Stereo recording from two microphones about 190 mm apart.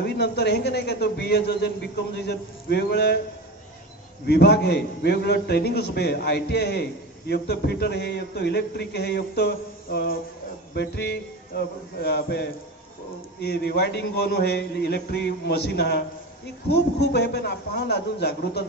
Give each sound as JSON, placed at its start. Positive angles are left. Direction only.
{"t": 0.0, "sound": "a man's voice", "side_deg": 60}
{"t": 4.3, "sound": "a man's voice", "side_deg": 60}
{"t": 13.4, "sound": "a man's voice", "side_deg": 60}
{"t": 17.1, "sound": "a man's voice", "side_deg": 65}